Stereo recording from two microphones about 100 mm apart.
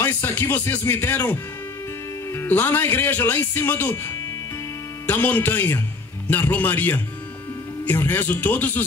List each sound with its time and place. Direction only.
0.0 s a man's voice: 25° left (ahead or behind)